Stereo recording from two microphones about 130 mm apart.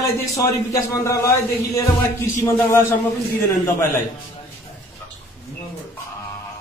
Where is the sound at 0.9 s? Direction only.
25° left (ahead or behind).